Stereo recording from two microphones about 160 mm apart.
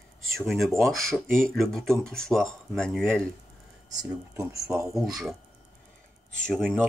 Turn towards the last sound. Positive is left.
turn(degrees=5)  # may be behind; listen again after turning